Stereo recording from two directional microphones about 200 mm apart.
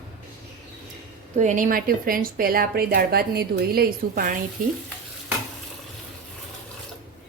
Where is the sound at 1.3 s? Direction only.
40° right (ahead or behind).